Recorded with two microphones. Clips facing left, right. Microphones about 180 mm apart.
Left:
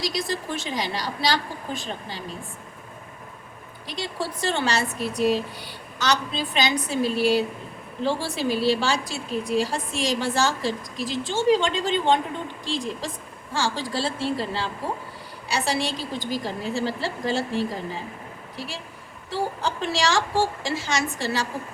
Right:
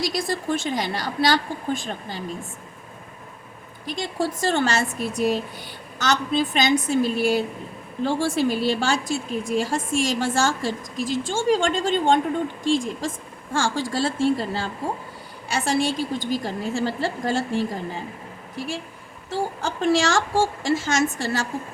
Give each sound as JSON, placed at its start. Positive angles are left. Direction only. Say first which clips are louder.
{"t": 0.0, "sound": "a woman's voice", "louder": "right 3 dB", "side_deg": -50}
{"t": 3.8, "sound": "a woman's voice", "louder": "right 4 dB", "side_deg": -50}
{"t": 18.5, "sound": "a woman's voice", "louder": "right 6 dB", "side_deg": -50}